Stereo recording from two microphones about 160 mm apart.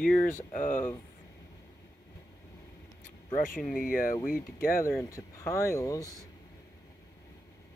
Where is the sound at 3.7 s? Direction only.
60° left (ahead or behind).